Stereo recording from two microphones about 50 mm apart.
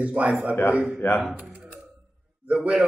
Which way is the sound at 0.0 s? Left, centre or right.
Right.